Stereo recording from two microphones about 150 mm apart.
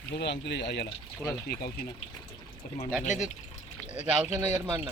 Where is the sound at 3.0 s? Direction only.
55° left (ahead or behind).